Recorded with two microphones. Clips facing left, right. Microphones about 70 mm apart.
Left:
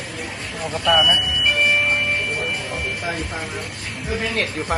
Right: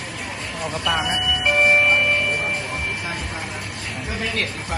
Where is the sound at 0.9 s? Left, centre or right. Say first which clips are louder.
Left 8 dB; centre.